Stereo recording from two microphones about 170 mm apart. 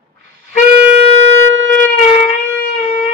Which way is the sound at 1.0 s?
40° left (ahead or behind).